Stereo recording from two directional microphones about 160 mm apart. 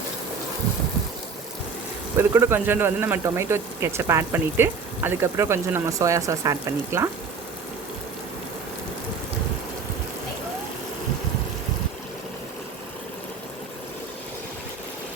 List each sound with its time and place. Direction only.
2.1 s speech: 15° right (ahead or behind)